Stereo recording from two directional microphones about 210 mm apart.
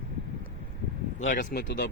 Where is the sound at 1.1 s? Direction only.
35° left (ahead or behind).